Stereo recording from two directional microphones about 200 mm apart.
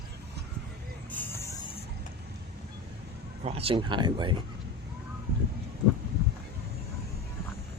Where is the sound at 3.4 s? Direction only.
30° right (ahead or behind).